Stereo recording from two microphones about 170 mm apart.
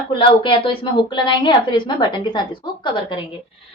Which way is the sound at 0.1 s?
30° left (ahead or behind).